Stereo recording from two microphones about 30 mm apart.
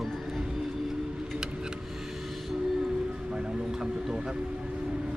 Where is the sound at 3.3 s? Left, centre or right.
Centre.